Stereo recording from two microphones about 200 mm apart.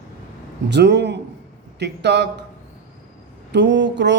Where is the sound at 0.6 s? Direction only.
60° right (ahead or behind).